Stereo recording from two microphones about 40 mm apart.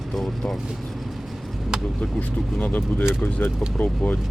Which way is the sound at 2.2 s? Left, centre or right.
Left.